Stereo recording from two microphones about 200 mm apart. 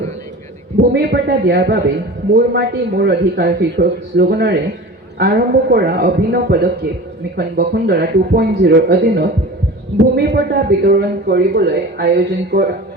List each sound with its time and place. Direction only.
0.8 s a man's voice: 55° right (ahead or behind)